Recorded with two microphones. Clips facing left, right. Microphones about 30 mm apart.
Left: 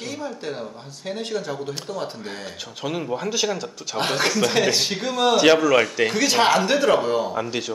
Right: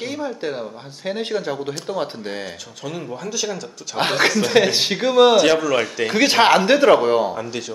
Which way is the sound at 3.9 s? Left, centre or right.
Centre.